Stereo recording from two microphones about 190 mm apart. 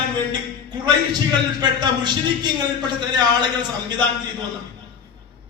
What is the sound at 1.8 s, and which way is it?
A man's voice, 20° right (ahead or behind).